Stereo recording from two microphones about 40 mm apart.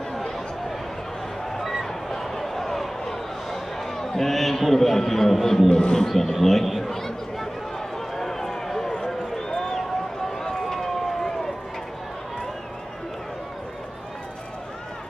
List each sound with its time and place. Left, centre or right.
1.6 s a sound: centre
3.8 s a man's voice: centre
5.7 s speech: left
6.0 s speech: centre
6.3 s chatter: centre
8.2 s run: centre